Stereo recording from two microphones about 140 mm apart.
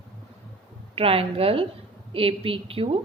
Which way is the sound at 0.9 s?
45° right (ahead or behind).